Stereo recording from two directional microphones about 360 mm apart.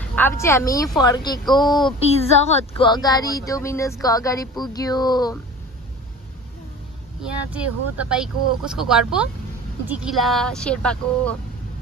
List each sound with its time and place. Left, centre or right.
0.1 s speech: centre
7.5 s speech: centre